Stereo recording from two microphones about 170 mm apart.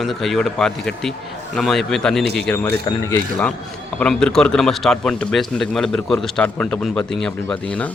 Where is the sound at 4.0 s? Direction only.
5° left (ahead or behind).